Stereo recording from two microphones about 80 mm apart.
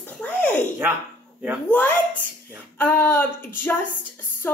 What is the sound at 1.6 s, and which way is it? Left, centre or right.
Speech, left.